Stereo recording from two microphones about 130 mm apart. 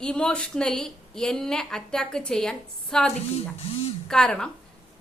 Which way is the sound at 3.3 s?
55° left (ahead or behind).